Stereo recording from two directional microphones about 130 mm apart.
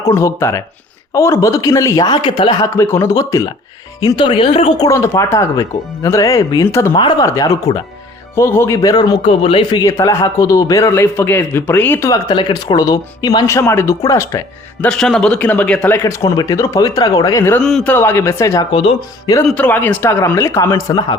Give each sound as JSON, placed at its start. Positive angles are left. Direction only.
{"t": 0.0, "sound": "a man's voice", "side_deg": 20}
{"t": 2.7, "sound": "a man's voice", "side_deg": 20}
{"t": 4.0, "sound": "speech", "side_deg": 40}
{"t": 4.8, "sound": "a man's voice", "side_deg": 25}
{"t": 9.2, "sound": "speech", "side_deg": 50}
{"t": 9.8, "sound": "a man's voice", "side_deg": 25}
{"t": 12.3, "sound": "a man's voice", "side_deg": 35}
{"t": 14.8, "sound": "a man's voice", "side_deg": 5}
{"t": 16.0, "sound": "a man's voice", "side_deg": 25}
{"t": 17.6, "sound": "speech", "side_deg": 5}
{"t": 17.9, "sound": "a man's voice", "side_deg": 15}
{"t": 18.7, "sound": "speech", "side_deg": 40}
{"t": 19.5, "sound": "a man's voice", "side_deg": 15}